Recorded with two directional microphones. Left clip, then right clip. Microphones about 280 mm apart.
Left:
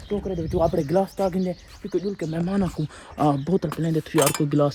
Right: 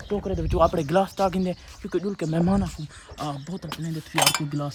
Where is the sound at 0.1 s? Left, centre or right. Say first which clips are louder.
Left 1 dB; right.